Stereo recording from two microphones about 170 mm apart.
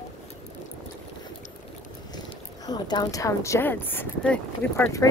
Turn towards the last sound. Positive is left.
turn(degrees=10)  # may be behind; listen again after turning